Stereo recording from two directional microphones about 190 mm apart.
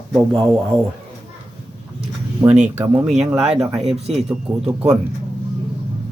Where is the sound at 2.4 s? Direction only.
10° right (ahead or behind).